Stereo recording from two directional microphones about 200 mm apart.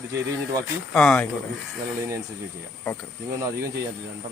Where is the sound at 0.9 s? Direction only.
5° left (ahead or behind).